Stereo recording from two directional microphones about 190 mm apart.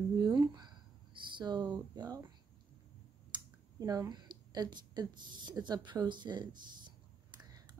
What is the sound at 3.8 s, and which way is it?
A woman's voice, 20° right (ahead or behind).